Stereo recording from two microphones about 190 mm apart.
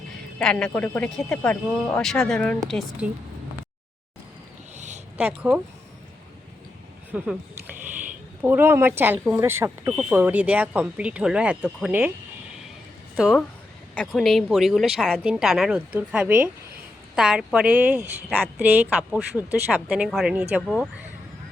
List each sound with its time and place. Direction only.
0.3 s a woman's voice: 5° left (ahead or behind)
4.7 s a sound: 35° right (ahead or behind)
5.1 s speech: 10° right (ahead or behind)
7.1 s speech: 5° right (ahead or behind)
8.4 s speech: 10° right (ahead or behind)
13.1 s a woman's voice: centre (ahead or behind)